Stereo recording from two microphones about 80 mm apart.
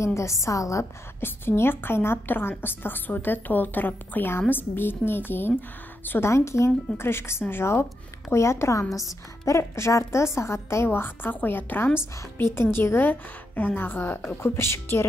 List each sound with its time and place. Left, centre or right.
0.0 s a woman's voice: left
1.2 s a woman's voice: left